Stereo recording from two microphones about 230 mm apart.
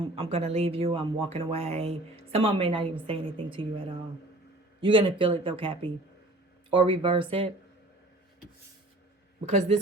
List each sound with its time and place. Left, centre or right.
0.2 s speech: right
4.8 s speech: right
9.5 s speech: right